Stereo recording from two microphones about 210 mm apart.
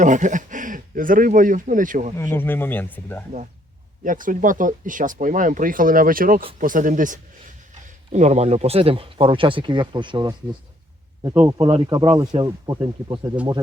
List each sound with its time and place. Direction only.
0.0 s speech: 35° right (ahead or behind)
2.1 s speech: 10° left (ahead or behind)
4.0 s speech: 40° right (ahead or behind); by 13.3 s 20° right (ahead or behind)